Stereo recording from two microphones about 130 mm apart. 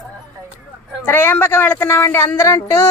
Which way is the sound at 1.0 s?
15° left (ahead or behind).